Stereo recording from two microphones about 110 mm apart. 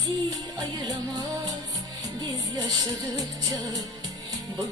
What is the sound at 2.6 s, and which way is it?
Music, 30° right (ahead or behind).